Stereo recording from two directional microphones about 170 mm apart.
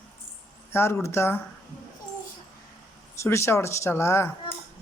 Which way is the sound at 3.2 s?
15° left (ahead or behind).